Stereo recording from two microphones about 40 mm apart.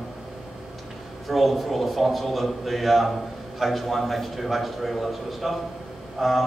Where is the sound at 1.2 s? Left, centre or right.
Centre.